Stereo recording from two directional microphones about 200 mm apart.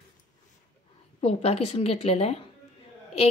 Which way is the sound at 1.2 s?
30° left (ahead or behind).